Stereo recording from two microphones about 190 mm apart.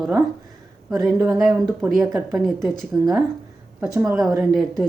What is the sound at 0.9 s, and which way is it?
A woman's voice, centre (ahead or behind).